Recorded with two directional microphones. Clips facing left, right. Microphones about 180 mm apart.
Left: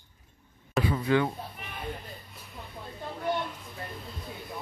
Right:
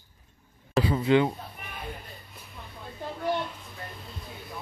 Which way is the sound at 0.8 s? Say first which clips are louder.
Right 3 dB; 25° right (ahead or behind).